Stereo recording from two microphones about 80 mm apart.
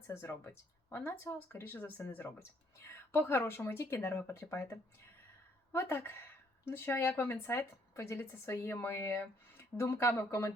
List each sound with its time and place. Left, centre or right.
0.1 s speech: left